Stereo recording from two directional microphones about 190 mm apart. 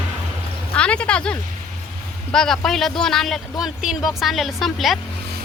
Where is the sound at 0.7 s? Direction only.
5° left (ahead or behind).